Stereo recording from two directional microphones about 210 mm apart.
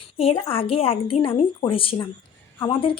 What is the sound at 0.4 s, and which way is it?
Speech, 25° left (ahead or behind).